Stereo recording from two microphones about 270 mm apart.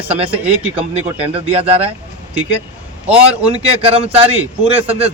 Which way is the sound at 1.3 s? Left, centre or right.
Right.